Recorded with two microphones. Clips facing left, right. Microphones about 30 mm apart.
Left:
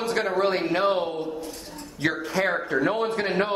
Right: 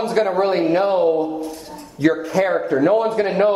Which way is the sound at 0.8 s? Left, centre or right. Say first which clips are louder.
Right 6 dB; left.